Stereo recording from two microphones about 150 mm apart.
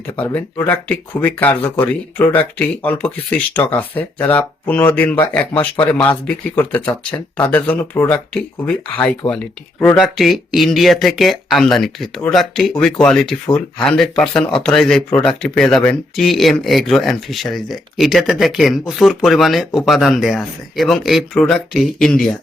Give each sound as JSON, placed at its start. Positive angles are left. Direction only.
{"t": 0.2, "sound": "speech", "side_deg": 10}
{"t": 5.7, "sound": "speech", "side_deg": 35}
{"t": 6.0, "sound": "speech", "side_deg": 10}